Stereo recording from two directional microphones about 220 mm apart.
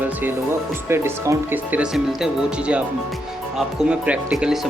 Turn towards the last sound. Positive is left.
turn(degrees=-5)  # may be behind; listen again after turning